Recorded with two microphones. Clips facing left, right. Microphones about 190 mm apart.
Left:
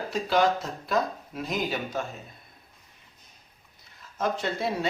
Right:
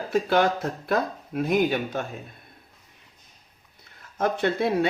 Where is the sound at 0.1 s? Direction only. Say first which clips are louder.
Right 3 dB; 55° right (ahead or behind).